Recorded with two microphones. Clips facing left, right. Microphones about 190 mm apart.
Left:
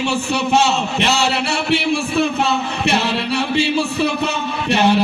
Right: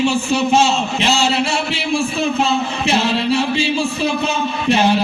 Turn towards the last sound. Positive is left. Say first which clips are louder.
# even
turn(degrees=65)  # may be behind; listen again after turning